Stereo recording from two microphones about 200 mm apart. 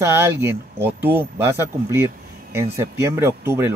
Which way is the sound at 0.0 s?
10° right (ahead or behind).